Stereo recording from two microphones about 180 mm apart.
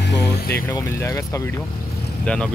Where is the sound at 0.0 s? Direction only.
60° left (ahead or behind).